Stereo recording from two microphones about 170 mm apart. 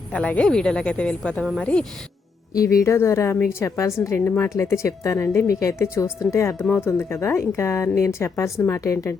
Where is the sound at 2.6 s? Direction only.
15° left (ahead or behind).